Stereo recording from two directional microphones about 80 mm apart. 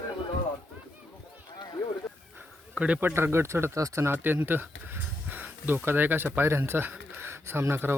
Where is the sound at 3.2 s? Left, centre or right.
Right.